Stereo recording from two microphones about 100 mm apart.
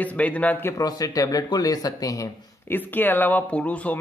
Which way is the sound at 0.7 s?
35° left (ahead or behind).